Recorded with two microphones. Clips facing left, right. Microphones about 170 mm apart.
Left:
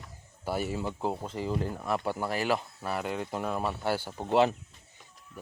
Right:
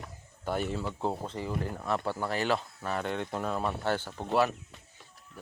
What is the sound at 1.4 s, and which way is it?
Speech, 20° left (ahead or behind).